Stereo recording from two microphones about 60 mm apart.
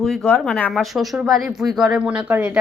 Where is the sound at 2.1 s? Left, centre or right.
Right.